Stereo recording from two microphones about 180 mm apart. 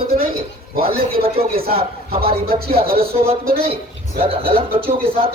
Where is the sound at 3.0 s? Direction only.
35° right (ahead or behind).